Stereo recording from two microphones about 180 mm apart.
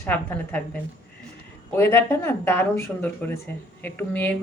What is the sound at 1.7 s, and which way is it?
A woman's voice, 15° left (ahead or behind).